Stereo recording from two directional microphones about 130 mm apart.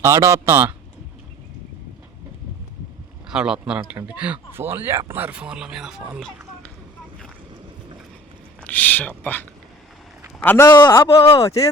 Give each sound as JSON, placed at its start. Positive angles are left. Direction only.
{"t": 0.0, "sound": "speech", "side_deg": -20}
{"t": 3.2, "sound": "speech", "side_deg": -5}
{"t": 8.6, "sound": "speech", "side_deg": 15}
{"t": 10.7, "sound": "speech", "side_deg": 30}
{"t": 11.1, "sound": "speech", "side_deg": 45}